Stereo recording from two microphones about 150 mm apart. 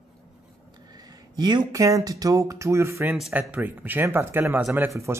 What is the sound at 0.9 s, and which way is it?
Speech, 25° right (ahead or behind).